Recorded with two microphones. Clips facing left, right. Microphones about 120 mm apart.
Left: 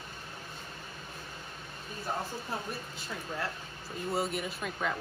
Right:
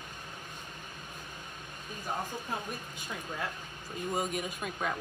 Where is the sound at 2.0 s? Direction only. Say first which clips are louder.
Even; 15° right (ahead or behind).